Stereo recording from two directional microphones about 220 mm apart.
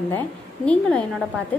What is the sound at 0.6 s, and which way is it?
Speech, 5° left (ahead or behind).